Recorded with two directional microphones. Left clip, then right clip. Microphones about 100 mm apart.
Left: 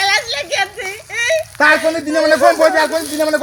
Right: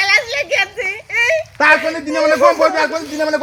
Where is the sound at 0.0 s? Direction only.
5° left (ahead or behind).